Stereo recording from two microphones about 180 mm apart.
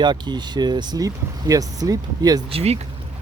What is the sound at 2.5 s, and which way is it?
Speech, 35° right (ahead or behind).